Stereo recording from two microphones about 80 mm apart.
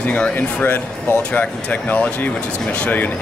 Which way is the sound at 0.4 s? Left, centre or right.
Left.